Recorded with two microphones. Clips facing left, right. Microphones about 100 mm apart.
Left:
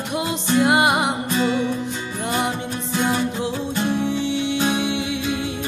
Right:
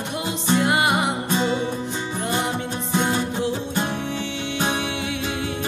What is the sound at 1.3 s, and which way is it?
Music, 20° right (ahead or behind).